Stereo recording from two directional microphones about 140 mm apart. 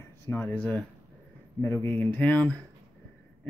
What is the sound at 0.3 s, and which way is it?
Speech, 10° left (ahead or behind).